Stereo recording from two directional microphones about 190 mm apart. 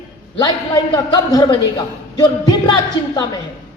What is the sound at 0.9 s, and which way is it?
A man's voice, 20° left (ahead or behind).